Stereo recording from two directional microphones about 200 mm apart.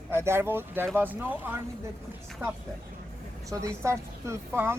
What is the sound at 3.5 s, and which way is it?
Speech, 15° right (ahead or behind).